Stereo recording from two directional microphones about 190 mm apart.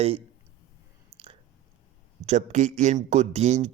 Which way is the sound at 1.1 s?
10° right (ahead or behind).